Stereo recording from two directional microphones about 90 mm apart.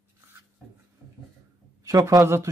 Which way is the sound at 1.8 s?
35° right (ahead or behind).